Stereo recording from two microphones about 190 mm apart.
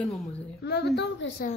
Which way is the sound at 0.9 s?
75° left (ahead or behind).